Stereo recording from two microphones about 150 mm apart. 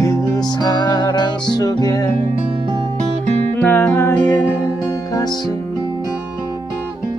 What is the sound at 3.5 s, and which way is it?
Music, 15° left (ahead or behind).